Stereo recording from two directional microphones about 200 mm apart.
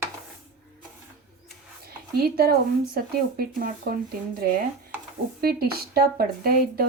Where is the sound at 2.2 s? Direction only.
50° right (ahead or behind).